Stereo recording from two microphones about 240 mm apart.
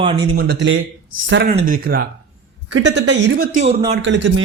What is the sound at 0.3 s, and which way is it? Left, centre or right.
A man's voice, right.